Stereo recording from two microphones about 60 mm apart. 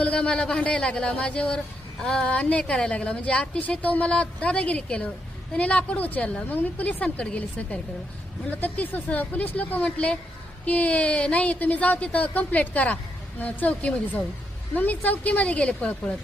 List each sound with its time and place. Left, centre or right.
0.0 s speech: centre